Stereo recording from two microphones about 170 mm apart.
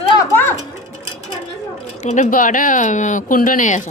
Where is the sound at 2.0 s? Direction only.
45° left (ahead or behind).